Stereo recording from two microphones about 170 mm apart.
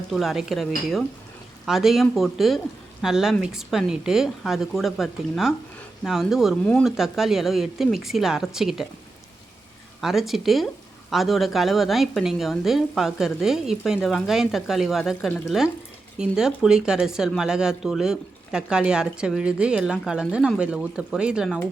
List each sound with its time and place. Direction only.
0.1 s speech: centre (ahead or behind)
10.0 s speech: centre (ahead or behind)